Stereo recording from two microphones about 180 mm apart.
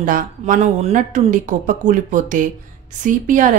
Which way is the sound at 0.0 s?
45° right (ahead or behind).